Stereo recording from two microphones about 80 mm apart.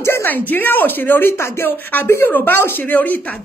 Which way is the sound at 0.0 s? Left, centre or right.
Left.